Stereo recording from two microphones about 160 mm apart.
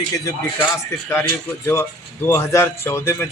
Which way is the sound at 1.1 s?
15° left (ahead or behind).